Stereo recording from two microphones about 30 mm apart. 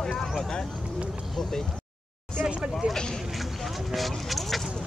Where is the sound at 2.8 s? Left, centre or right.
Right.